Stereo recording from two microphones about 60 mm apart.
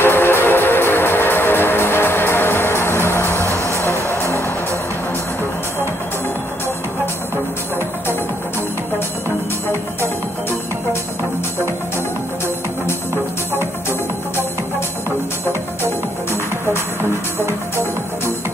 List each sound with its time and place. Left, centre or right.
0.0 s music: left
3.4 s music: right
3.8 s music: left